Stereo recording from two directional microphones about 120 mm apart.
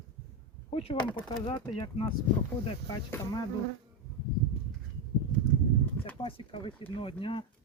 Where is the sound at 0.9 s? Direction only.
40° left (ahead or behind).